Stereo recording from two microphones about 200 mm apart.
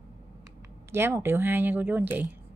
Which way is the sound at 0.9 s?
10° right (ahead or behind).